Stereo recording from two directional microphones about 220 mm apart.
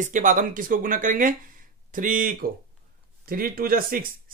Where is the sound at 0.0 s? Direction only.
35° right (ahead or behind).